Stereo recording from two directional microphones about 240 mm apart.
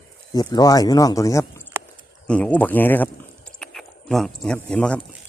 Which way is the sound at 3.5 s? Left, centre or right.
Centre.